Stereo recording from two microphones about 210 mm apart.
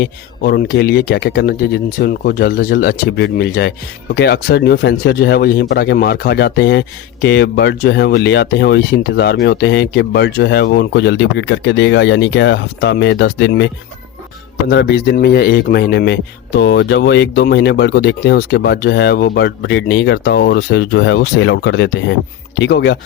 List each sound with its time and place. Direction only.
0.0 s speech: 50° left (ahead or behind)
14.7 s speech: 55° left (ahead or behind)